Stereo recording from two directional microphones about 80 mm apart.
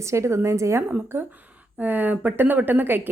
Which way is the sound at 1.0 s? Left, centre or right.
Right.